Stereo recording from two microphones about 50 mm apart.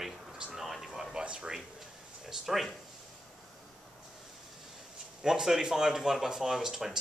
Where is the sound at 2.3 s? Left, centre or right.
Centre.